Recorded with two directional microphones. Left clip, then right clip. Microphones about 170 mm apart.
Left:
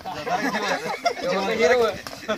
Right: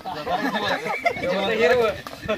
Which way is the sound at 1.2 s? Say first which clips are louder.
Even; 15° right (ahead or behind).